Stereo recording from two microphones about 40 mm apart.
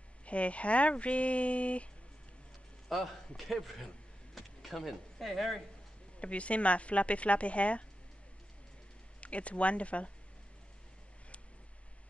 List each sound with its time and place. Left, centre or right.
0.2 s speech: left
2.9 s a man's voice: centre
6.1 s speech: left
9.2 s speech: left